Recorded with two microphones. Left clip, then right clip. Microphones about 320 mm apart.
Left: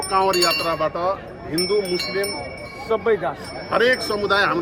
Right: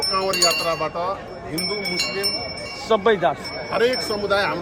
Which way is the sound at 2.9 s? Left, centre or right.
Right.